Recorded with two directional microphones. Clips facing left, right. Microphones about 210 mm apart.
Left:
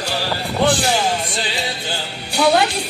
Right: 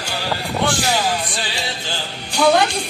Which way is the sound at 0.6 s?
25° left (ahead or behind).